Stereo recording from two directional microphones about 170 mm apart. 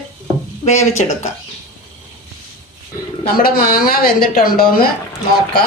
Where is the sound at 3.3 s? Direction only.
60° left (ahead or behind).